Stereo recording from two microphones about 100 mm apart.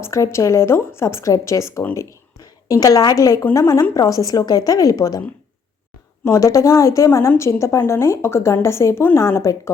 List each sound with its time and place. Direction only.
0.0 s a woman's voice: 30° left (ahead or behind)
6.2 s a woman's voice: 30° left (ahead or behind)